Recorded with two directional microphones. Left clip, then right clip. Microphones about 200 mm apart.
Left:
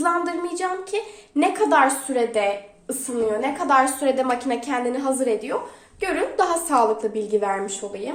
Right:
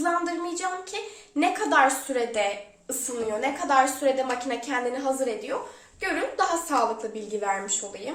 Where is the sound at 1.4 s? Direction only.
35° left (ahead or behind).